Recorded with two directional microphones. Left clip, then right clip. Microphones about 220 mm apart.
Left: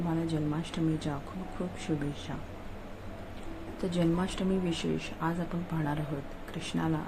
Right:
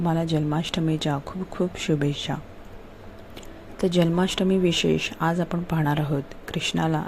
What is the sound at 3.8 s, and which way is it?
Speech, 30° right (ahead or behind).